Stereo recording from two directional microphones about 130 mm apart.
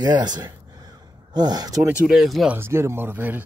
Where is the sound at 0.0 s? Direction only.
35° right (ahead or behind).